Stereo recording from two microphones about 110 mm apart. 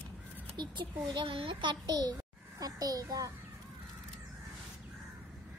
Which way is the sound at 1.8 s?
35° right (ahead or behind).